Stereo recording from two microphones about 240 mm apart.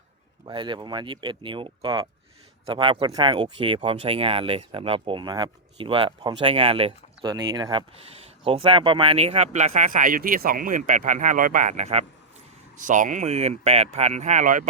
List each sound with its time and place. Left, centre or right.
0.4 s speech: centre